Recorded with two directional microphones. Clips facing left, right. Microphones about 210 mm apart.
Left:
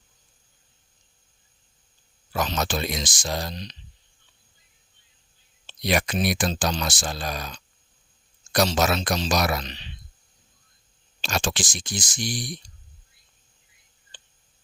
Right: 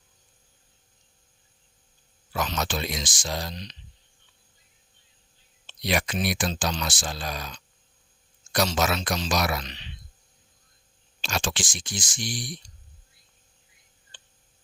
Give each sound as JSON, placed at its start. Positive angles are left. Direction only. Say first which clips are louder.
{"t": 2.5, "sound": "speech", "louder": "left 3 dB", "side_deg": 40}
{"t": 5.6, "sound": "speech", "louder": "left 3 dB", "side_deg": 45}
{"t": 11.2, "sound": "speech", "louder": "left 3 dB", "side_deg": 45}